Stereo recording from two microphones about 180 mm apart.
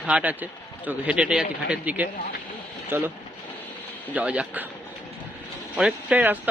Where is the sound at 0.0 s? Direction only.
5° right (ahead or behind).